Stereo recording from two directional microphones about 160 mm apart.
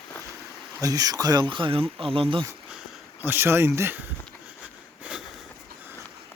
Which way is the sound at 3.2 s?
15° right (ahead or behind).